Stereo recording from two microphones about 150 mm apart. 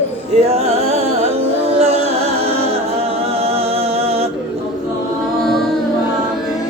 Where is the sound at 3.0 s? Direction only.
40° right (ahead or behind).